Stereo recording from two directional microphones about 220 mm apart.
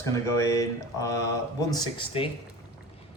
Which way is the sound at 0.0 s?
15° left (ahead or behind).